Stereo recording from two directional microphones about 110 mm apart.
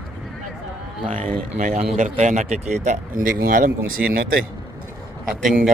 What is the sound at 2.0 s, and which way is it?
Speech, 90° right.